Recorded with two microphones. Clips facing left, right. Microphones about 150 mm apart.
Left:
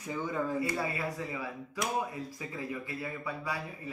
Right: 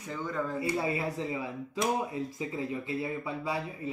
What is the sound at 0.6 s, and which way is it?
Speech, 25° right (ahead or behind).